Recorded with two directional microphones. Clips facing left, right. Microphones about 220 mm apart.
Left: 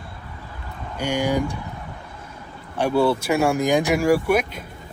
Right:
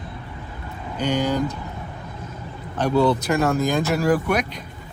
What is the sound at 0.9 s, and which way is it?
Speech, 10° left (ahead or behind).